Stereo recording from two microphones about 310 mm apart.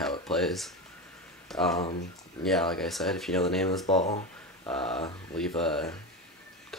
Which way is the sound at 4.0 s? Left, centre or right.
Left.